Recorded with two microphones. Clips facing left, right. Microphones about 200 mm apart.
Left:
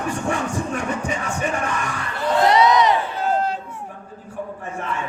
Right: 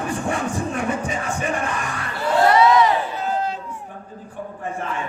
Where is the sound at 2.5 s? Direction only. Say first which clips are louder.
Right 1 dB; 15° left (ahead or behind).